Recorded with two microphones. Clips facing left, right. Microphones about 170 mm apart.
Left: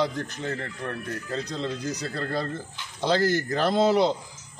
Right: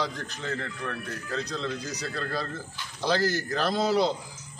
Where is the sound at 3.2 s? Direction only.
55° left (ahead or behind).